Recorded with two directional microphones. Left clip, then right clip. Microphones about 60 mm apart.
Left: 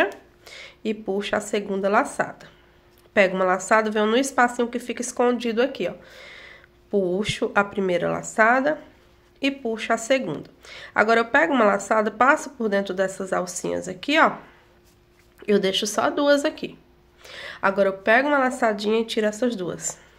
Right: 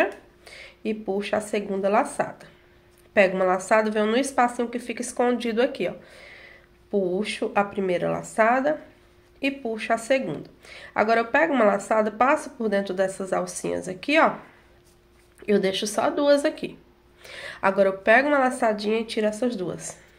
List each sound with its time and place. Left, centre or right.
0.0 s a woman's voice: left
5.2 s speech: centre
6.0 s a sound: left
7.5 s a woman's voice: left
9.4 s a woman's voice: left
15.4 s a woman's voice: left
17.2 s speech: centre
18.5 s a woman's voice: left
18.8 s a woman's voice: left